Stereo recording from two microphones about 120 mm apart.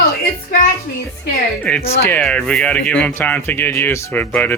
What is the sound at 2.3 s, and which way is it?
Speech, 5° left (ahead or behind).